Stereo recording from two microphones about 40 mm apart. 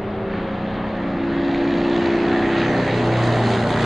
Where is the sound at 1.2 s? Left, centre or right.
Centre.